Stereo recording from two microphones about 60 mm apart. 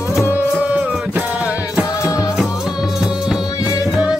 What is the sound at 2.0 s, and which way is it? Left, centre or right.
Music, left.